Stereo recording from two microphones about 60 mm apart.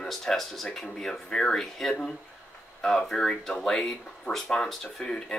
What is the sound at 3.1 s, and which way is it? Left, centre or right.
Speech, centre.